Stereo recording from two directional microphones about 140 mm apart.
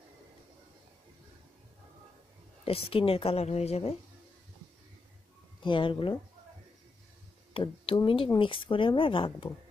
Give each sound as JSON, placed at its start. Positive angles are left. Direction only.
{"t": 2.6, "sound": "speech", "side_deg": 45}
{"t": 5.6, "sound": "speech", "side_deg": 35}
{"t": 7.5, "sound": "speech", "side_deg": 40}